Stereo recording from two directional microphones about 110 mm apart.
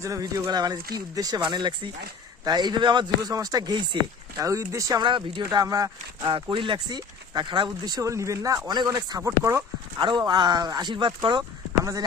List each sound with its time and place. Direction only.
0.0 s speech: 30° right (ahead or behind)
4.4 s speech: 30° right (ahead or behind)
5.0 s speech: 45° right (ahead or behind)
6.2 s speech: 50° right (ahead or behind); by 9.6 s 25° right (ahead or behind)
10.0 s speech: 40° right (ahead or behind)